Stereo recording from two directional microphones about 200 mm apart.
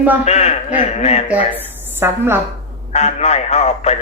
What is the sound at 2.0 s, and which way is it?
Speech, 10° right (ahead or behind).